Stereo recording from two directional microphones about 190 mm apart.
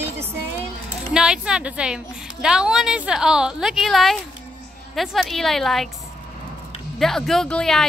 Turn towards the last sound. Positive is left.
turn(degrees=5)  # may be behind; listen again after turning